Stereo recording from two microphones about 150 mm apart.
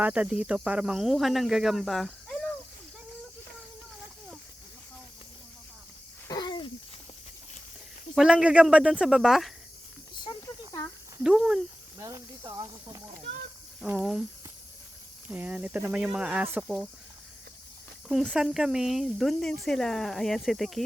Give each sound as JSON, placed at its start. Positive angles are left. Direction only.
{"t": 0.0, "sound": "speech", "side_deg": -10}
{"t": 6.2, "sound": "a sound", "side_deg": 25}
{"t": 8.1, "sound": "speech", "side_deg": 0}
{"t": 10.2, "sound": "a sound", "side_deg": 20}
{"t": 11.2, "sound": "speech", "side_deg": -5}
{"t": 11.9, "sound": "speech", "side_deg": -20}
{"t": 13.8, "sound": "speech", "side_deg": -5}
{"t": 15.3, "sound": "speech", "side_deg": -10}
{"t": 18.1, "sound": "speech", "side_deg": -5}